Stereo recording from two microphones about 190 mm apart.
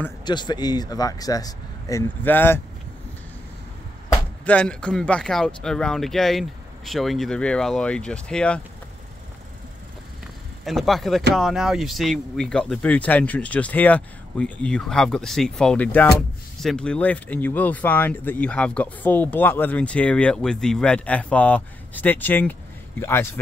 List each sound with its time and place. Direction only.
0.2 s speech: 25° left (ahead or behind)
4.1 s speech: 5° left (ahead or behind)
10.6 s speech: centre (ahead or behind)